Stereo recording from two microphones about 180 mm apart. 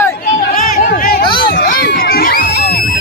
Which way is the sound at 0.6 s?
60° left (ahead or behind).